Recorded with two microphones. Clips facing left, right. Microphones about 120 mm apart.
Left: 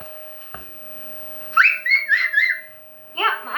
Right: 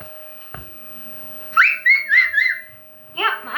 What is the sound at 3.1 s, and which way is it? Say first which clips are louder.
Speech: even; 30° left (ahead or behind).